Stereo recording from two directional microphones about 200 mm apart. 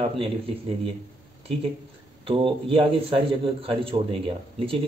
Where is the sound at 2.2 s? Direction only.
25° right (ahead or behind).